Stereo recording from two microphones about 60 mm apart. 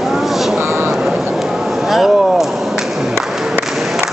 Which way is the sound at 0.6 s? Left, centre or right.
Right.